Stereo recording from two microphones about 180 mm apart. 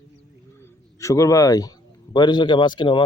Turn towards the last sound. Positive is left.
turn(degrees=25)  # may be behind; listen again after turning